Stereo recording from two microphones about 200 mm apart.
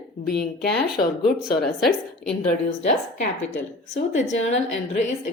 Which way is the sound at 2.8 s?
35° left (ahead or behind).